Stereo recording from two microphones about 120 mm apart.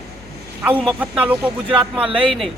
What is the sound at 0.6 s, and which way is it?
A man's voice, 15° right (ahead or behind).